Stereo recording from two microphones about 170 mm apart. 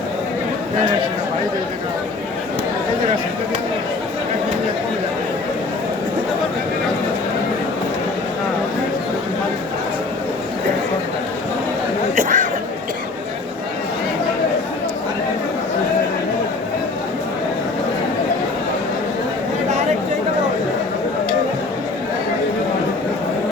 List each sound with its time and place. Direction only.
12.1 s chatter: 50° right (ahead or behind)